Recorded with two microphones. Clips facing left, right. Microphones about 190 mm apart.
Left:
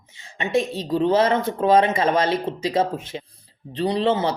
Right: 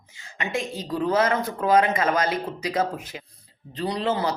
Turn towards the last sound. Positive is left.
turn(degrees=25)  # may be behind; listen again after turning